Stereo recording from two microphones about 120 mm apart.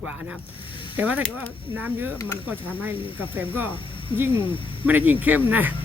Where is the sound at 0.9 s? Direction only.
15° right (ahead or behind).